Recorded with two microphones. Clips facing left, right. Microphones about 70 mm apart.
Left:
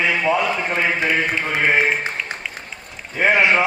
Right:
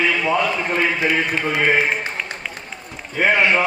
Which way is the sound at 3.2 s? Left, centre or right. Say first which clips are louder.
Left 1 dB; centre.